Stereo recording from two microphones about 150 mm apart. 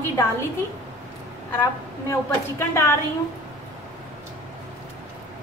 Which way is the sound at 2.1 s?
15° left (ahead or behind).